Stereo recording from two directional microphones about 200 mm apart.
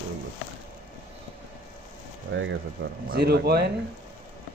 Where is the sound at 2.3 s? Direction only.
65° right (ahead or behind).